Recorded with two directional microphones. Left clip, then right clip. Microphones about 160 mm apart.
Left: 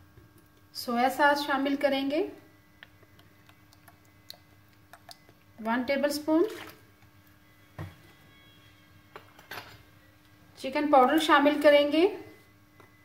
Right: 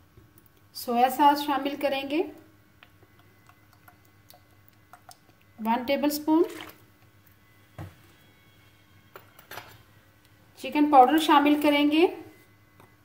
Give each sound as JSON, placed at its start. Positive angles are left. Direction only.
{"t": 0.7, "sound": "a woman's voice", "side_deg": -50}
{"t": 5.6, "sound": "a woman's voice", "side_deg": -55}
{"t": 10.5, "sound": "a woman's voice", "side_deg": -50}